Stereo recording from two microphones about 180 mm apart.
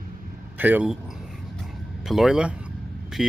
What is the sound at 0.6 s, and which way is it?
Speech, 10° right (ahead or behind).